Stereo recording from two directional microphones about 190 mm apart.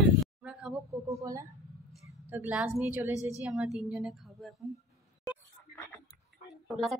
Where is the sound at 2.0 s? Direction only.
10° right (ahead or behind).